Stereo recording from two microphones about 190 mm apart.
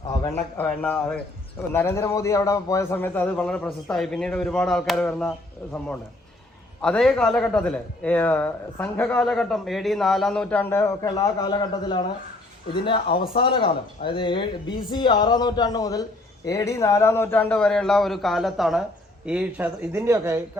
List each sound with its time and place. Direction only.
0.1 s a man's voice: 15° left (ahead or behind)
6.8 s a man's voice: 5° left (ahead or behind); by 20.4 s 15° right (ahead or behind)